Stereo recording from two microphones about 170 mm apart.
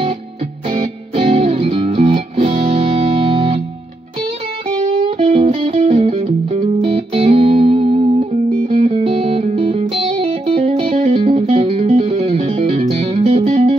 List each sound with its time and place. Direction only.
0.7 s music: 35° right (ahead or behind)
4.8 s music: 35° right (ahead or behind)